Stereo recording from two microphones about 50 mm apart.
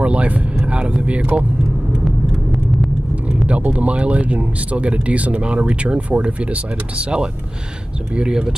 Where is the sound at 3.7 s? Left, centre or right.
Right.